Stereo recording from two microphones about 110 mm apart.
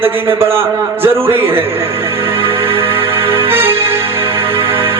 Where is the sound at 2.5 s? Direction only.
20° right (ahead or behind).